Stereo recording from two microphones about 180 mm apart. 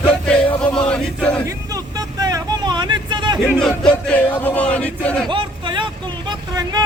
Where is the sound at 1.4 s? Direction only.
20° right (ahead or behind).